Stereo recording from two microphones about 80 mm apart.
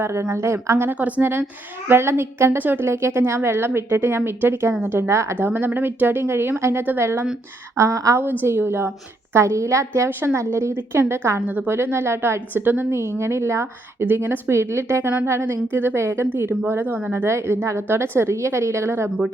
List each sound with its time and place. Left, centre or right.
0.0 s a woman's voice: right
0.9 s a woman's voice: centre
7.8 s a woman's voice: right
8.2 s a woman's voice: right
11.3 s a woman's voice: centre
11.7 s a woman's voice: right
14.0 s a woman's voice: right
17.2 s a woman's voice: right